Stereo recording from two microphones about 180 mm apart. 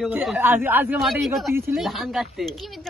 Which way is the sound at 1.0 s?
Centre (ahead or behind).